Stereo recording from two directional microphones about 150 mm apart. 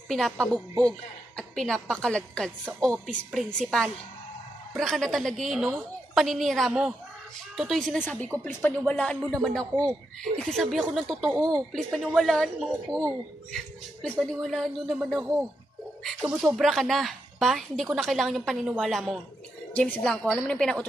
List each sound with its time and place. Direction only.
0.1 s a woman's voice: 5° left (ahead or behind)
11.3 s speech: 20° right (ahead or behind)
11.7 s a woman's voice: centre (ahead or behind)